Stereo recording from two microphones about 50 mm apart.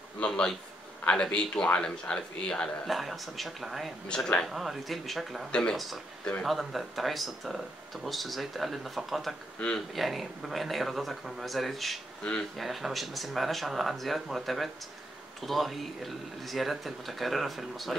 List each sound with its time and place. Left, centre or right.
0.3 s a man's voice: centre
2.9 s speech: centre
4.1 s speech: centre
4.5 s speech: centre
5.5 s a man's voice: centre
6.4 s speech: centre
12.2 s speech: left
12.5 s speech: centre